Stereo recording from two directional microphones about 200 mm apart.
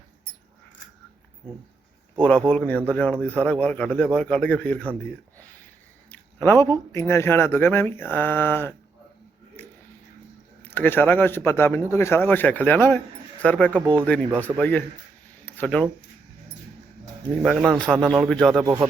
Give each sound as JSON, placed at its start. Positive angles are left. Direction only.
{"t": 2.2, "sound": "speech", "side_deg": 5}
{"t": 6.1, "sound": "speech", "side_deg": 10}
{"t": 9.6, "sound": "a sound", "side_deg": 10}
{"t": 10.6, "sound": "speech", "side_deg": 10}
{"t": 15.4, "sound": "a sound", "side_deg": 10}
{"t": 17.7, "sound": "speech", "side_deg": 5}
{"t": 18.6, "sound": "speech", "side_deg": -15}